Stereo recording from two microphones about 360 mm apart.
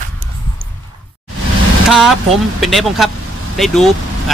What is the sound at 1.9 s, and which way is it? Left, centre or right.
Speech, centre.